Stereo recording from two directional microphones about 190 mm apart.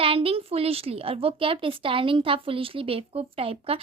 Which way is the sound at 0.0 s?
30° right (ahead or behind).